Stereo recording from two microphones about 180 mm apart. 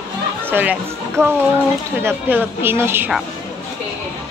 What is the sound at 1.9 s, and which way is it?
A woman's voice, 10° right (ahead or behind).